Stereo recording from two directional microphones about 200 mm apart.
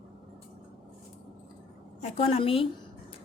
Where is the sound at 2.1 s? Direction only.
30° left (ahead or behind).